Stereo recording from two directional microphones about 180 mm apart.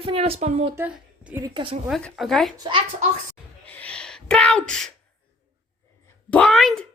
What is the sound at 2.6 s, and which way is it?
Speech, 25° right (ahead or behind).